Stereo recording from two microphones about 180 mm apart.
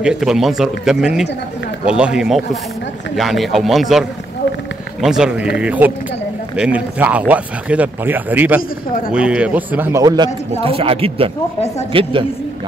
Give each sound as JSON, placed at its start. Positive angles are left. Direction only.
{"t": 0.0, "sound": "speech", "side_deg": -5}
{"t": 5.0, "sound": "a woman's voice", "side_deg": -5}